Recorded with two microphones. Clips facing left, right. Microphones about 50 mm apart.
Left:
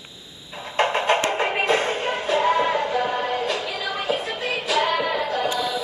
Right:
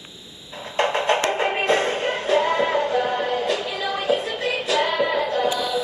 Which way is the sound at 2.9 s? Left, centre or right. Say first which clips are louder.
Right 1 dB; centre.